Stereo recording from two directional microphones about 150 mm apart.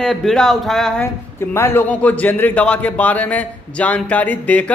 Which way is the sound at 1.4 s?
15° left (ahead or behind).